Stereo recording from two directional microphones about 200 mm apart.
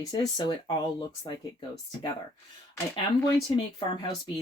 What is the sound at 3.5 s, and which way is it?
Speech, 20° left (ahead or behind).